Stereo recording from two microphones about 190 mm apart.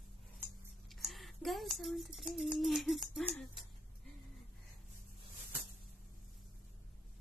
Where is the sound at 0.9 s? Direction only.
Centre (ahead or behind).